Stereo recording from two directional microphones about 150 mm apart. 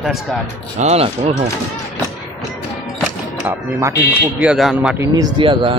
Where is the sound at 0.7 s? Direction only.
45° right (ahead or behind).